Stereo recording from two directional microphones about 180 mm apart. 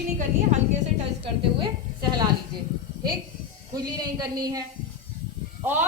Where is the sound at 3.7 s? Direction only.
20° right (ahead or behind).